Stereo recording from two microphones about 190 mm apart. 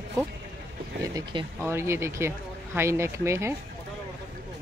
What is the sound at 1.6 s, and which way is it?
Speech, 15° right (ahead or behind).